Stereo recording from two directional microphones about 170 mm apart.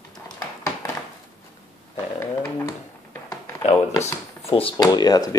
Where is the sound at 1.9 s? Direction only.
20° left (ahead or behind).